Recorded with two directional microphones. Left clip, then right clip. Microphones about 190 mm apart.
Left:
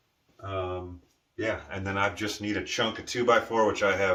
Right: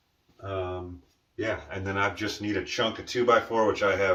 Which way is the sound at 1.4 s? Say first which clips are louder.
Even; 10° left (ahead or behind).